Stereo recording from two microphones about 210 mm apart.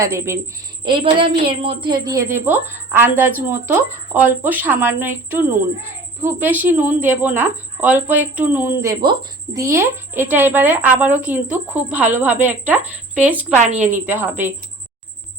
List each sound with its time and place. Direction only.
0.0 s a woman's voice: 15° right (ahead or behind)
13.6 s a woman's voice: 35° right (ahead or behind)
13.9 s a woman's voice: 10° right (ahead or behind)